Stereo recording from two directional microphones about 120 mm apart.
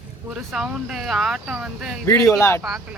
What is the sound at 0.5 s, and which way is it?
Speech, 5° right (ahead or behind).